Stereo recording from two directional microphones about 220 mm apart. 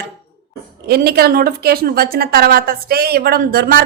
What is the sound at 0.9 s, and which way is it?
A woman's voice, 45° right (ahead or behind).